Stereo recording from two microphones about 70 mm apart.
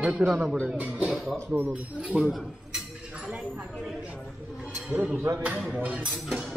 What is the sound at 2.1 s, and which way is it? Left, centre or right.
Speech, centre.